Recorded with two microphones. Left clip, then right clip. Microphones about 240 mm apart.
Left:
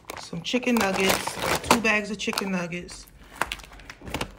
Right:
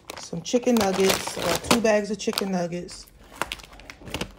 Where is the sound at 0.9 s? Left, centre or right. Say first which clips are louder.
Right 1 dB; centre.